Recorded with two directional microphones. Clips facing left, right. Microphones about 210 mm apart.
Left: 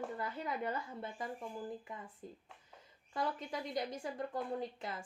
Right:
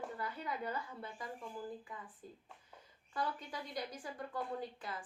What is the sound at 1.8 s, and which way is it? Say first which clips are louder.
Speech: left 2 dB; 25° left (ahead or behind).